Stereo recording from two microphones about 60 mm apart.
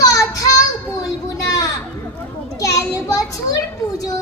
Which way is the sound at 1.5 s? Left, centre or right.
Left.